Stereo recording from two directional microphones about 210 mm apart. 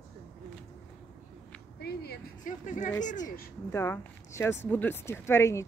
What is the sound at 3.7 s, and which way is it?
Speech, 10° left (ahead or behind).